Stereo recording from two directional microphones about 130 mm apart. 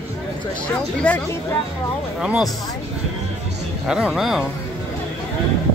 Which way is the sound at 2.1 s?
5° right (ahead or behind).